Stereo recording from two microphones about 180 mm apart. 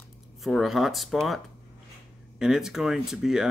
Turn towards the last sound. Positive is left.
turn(degrees=0)  # may be behind; listen again after turning